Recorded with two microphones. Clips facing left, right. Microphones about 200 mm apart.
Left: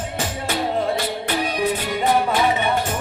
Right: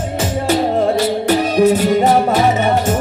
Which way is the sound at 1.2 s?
45° right (ahead or behind).